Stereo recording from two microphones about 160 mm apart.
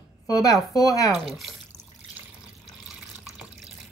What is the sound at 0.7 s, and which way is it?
Speech, 20° left (ahead or behind).